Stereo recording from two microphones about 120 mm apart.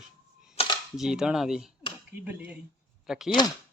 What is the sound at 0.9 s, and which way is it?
Speech, 5° right (ahead or behind).